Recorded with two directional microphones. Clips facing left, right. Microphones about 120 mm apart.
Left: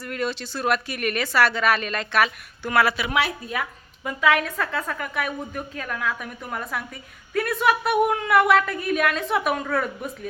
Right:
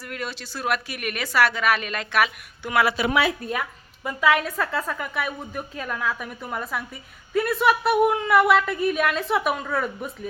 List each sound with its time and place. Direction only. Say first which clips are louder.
0.0 s a woman's voice: left 5 dB; 5° right (ahead or behind)
3.4 s a woman's voice: right 3 dB; 60° right (ahead or behind)
4.3 s a woman's voice: even; 10° right (ahead or behind)